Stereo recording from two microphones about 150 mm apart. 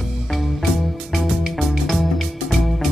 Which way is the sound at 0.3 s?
Centre (ahead or behind).